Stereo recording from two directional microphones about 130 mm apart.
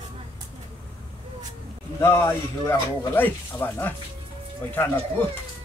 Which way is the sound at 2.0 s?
20° left (ahead or behind).